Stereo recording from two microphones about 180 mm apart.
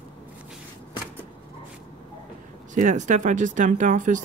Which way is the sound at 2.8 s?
40° right (ahead or behind).